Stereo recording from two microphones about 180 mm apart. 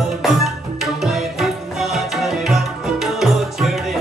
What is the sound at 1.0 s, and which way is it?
Music, centre (ahead or behind).